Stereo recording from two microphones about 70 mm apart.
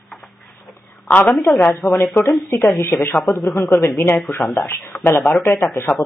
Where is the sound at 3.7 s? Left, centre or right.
Left.